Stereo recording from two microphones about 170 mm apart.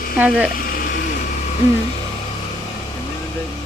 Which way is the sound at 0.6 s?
55° left (ahead or behind).